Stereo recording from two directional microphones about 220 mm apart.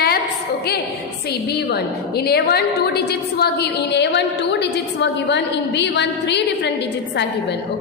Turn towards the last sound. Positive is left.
turn(degrees=50)  # may be behind; listen again after turning